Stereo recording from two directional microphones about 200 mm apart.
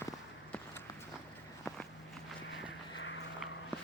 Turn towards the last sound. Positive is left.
turn(degrees=70)  # may be behind; listen again after turning